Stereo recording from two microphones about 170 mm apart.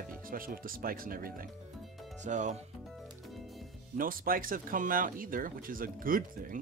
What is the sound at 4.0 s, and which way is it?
Speech, 55° right (ahead or behind).